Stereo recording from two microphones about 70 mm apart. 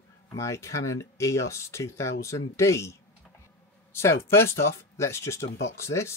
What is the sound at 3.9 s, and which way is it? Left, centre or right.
Speech, left.